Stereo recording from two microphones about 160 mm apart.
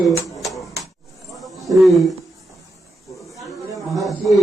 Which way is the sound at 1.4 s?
Centre (ahead or behind).